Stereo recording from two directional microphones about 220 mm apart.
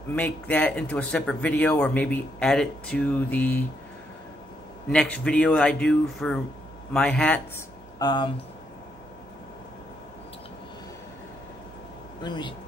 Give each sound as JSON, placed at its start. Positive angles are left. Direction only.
{"t": 0.1, "sound": "speech", "side_deg": 5}
{"t": 4.9, "sound": "speech", "side_deg": 5}
{"t": 8.0, "sound": "speech", "side_deg": 20}
{"t": 12.2, "sound": "speech", "side_deg": 20}